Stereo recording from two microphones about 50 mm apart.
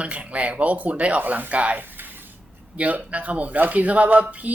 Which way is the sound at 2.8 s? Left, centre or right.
Right.